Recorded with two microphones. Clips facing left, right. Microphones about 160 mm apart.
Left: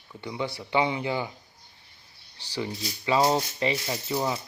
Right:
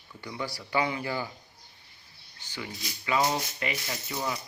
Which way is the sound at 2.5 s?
30° left (ahead or behind).